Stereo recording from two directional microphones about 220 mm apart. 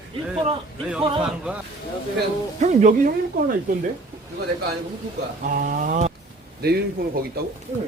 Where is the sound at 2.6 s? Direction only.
30° right (ahead or behind).